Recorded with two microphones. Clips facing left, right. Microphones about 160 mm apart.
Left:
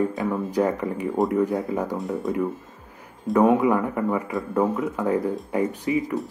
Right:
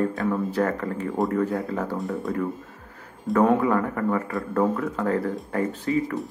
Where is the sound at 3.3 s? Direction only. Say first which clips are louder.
Left 2 dB; 15° left (ahead or behind).